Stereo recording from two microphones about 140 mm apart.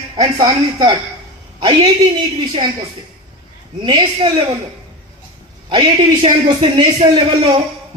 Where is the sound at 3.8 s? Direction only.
35° right (ahead or behind).